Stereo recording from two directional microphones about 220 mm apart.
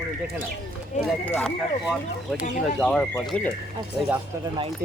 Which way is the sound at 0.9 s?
30° left (ahead or behind).